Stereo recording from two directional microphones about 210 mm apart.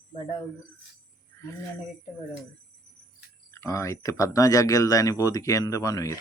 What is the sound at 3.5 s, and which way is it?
Speech, 15° left (ahead or behind).